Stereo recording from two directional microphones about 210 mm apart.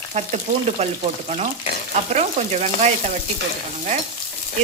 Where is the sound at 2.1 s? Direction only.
30° right (ahead or behind).